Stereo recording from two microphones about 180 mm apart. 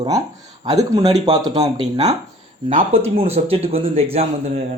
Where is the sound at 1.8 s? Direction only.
35° right (ahead or behind).